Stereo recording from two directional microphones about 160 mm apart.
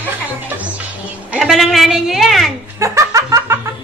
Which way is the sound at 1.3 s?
Centre (ahead or behind).